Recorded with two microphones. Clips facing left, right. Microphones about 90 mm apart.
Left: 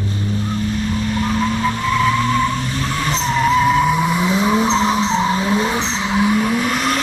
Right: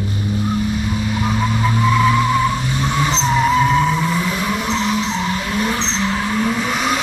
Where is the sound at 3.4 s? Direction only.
5° left (ahead or behind); by 5.8 s 25° left (ahead or behind).